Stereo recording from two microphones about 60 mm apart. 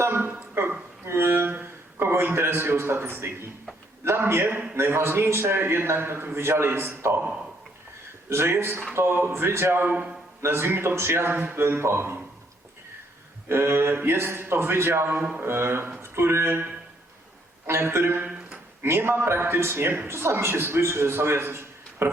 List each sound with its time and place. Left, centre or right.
0.0 s a sound: right
4.0 s a man's voice: right
8.3 s a man's voice: right
9.8 s a man's voice: right
10.4 s a man's voice: right
13.5 s a man's voice: right
17.7 s a man's voice: right
18.3 s a sound: centre
18.8 s a man's voice: right